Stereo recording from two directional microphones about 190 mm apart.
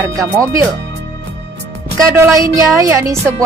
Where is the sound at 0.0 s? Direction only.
15° right (ahead or behind).